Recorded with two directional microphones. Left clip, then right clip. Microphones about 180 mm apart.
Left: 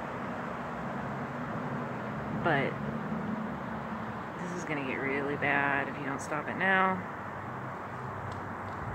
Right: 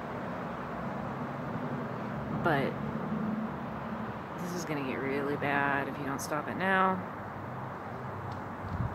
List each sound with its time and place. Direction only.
2.4 s speech: 15° right (ahead or behind)
4.6 s speech: 10° right (ahead or behind)